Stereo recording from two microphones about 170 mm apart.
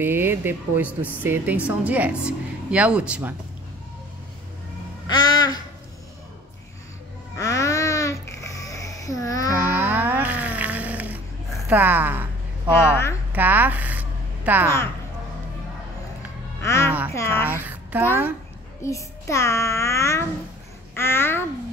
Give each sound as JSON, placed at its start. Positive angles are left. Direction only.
{"t": 0.0, "sound": "a woman's voice", "side_deg": -10}
{"t": 5.0, "sound": "babbling", "side_deg": 25}
{"t": 7.3, "sound": "babbling", "side_deg": 20}
{"t": 9.5, "sound": "a sound", "side_deg": -10}
{"t": 16.6, "sound": "music", "side_deg": 15}
{"t": 17.1, "sound": "a child's voice", "side_deg": 15}
{"t": 17.5, "sound": "a woman's voice", "side_deg": -10}
{"t": 18.8, "sound": "a child's voice", "side_deg": 15}
{"t": 20.9, "sound": "babbling", "side_deg": 15}